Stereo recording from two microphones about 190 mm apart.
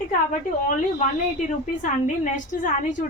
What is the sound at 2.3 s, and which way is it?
Speech, 40° left (ahead or behind).